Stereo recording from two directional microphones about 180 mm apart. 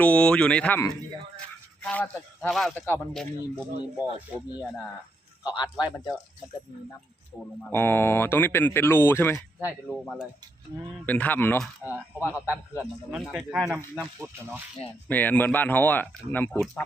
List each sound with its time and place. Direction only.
0.0 s speech: 5° left (ahead or behind)
5.5 s speech: 5° right (ahead or behind)
7.7 s speech: 10° left (ahead or behind)
9.6 s speech: centre (ahead or behind)
11.0 s speech: 10° left (ahead or behind)
12.8 s speech: 5° right (ahead or behind)
15.0 s speech: 10° left (ahead or behind)